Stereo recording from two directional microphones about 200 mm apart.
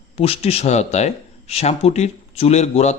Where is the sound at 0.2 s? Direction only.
30° left (ahead or behind).